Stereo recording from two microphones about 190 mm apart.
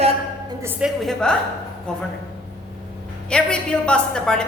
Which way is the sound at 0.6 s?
10° right (ahead or behind).